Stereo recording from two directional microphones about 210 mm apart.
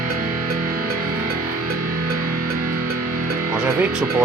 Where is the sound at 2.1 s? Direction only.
45° right (ahead or behind).